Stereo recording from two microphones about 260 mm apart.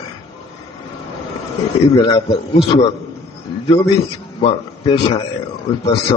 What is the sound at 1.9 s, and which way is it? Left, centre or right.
Speech, centre.